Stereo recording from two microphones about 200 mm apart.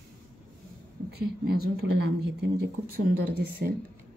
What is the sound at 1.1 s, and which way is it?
Mantra, 50° right (ahead or behind).